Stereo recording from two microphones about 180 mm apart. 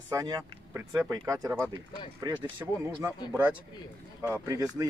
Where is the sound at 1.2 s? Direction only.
20° right (ahead or behind).